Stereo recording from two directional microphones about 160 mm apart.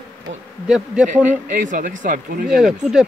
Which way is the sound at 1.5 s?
55° right (ahead or behind).